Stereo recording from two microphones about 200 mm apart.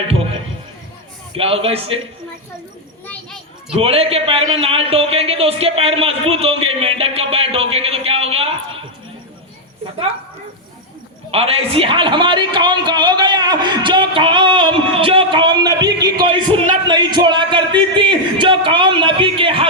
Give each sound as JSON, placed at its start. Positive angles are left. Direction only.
{"t": 1.4, "sound": "a man's voice", "side_deg": -30}
{"t": 3.1, "sound": "children playing", "side_deg": 5}
{"t": 3.8, "sound": "a man's voice", "side_deg": -30}
{"t": 11.3, "sound": "a man's voice", "side_deg": -30}